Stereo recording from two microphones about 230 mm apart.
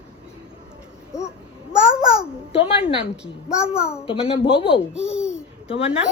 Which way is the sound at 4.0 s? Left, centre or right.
Left.